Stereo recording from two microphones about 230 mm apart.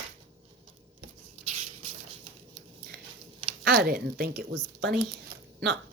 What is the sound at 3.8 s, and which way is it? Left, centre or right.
Speech, right.